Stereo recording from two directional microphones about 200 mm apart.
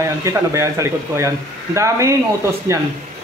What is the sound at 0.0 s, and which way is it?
Speech, 15° right (ahead or behind).